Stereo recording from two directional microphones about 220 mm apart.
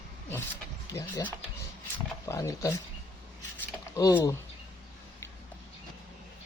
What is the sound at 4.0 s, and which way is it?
Speech, 15° left (ahead or behind).